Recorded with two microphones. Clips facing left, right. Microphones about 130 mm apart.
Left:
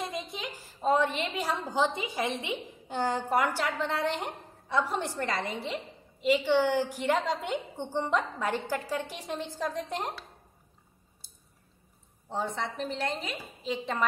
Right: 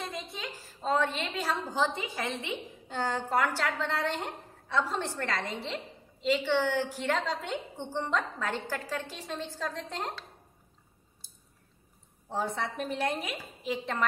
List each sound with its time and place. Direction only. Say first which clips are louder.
0.0 s a woman's voice: left 3 dB; 15° left (ahead or behind)
12.3 s speech: even; 5° right (ahead or behind)